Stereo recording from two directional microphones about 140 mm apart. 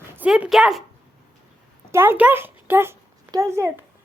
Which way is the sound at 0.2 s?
10° right (ahead or behind).